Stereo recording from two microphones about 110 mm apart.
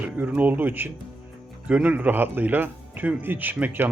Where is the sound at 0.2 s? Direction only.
15° right (ahead or behind).